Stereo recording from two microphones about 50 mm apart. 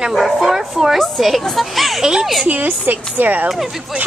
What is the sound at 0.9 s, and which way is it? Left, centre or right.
A woman's voice, centre.